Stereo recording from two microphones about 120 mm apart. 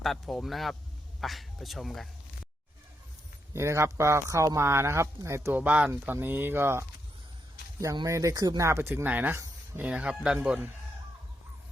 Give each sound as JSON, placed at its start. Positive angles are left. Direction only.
{"t": 0.0, "sound": "speech", "side_deg": 0}
{"t": 3.5, "sound": "speech", "side_deg": -25}
{"t": 8.0, "sound": "speech", "side_deg": -25}